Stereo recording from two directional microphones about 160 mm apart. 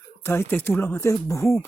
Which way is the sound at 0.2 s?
15° left (ahead or behind).